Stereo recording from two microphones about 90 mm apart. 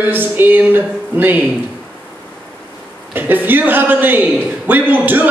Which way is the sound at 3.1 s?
20° right (ahead or behind).